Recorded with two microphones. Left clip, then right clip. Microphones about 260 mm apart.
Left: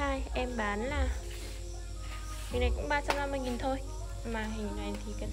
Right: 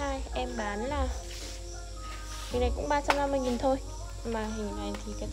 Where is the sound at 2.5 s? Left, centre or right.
Centre.